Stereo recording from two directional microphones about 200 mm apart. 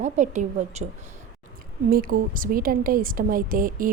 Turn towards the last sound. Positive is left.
turn(degrees=-45)  # may be behind; listen again after turning